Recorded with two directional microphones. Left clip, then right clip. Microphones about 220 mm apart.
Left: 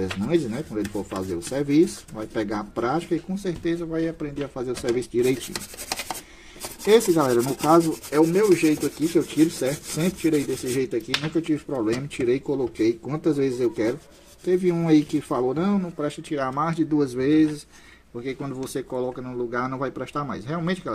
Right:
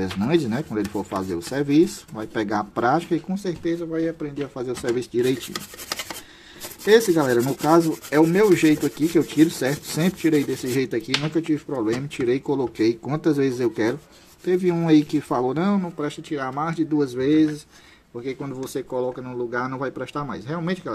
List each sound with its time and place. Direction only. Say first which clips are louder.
0.0 s speech: right 2 dB; 15° right (ahead or behind)
3.6 s speech: right 1 dB; centre (ahead or behind)
6.9 s speech: right 1 dB; 5° right (ahead or behind)
8.2 s rub: right 2 dB; 25° right (ahead or behind)
11.4 s speech: right 1 dB; 5° right (ahead or behind)
16.0 s speech: left 1 dB; centre (ahead or behind)